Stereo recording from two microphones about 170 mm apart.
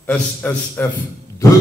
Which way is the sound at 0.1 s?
10° left (ahead or behind).